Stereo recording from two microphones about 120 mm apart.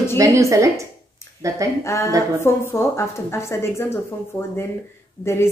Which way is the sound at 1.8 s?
25° left (ahead or behind).